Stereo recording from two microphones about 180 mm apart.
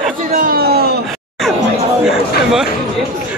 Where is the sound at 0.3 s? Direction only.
50° right (ahead or behind).